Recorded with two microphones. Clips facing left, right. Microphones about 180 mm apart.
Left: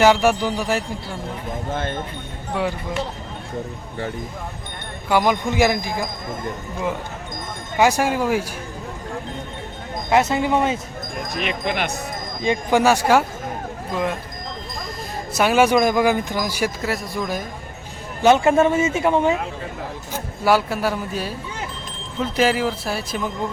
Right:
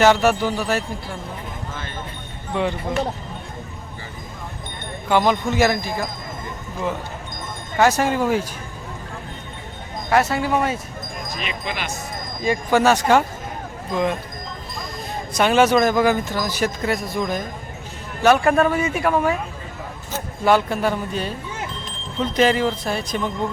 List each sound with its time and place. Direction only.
0.0 s speech: 10° left (ahead or behind)
1.7 s clip-clop: 60° left (ahead or behind)
5.0 s speech: 10° left (ahead or behind)
7.8 s speech: 10° left (ahead or behind)
10.1 s speech: 20° left (ahead or behind)
11.3 s speech: 60° left (ahead or behind)
12.4 s speech: 20° left (ahead or behind)
12.8 s speech: 10° left (ahead or behind)
15.3 s speech: 5° left (ahead or behind)
18.2 s speech: 20° left (ahead or behind)
20.1 s a man's voice: 5° left (ahead or behind)